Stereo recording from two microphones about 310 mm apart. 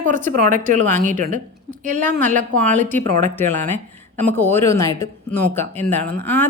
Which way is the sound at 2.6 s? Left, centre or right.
Centre.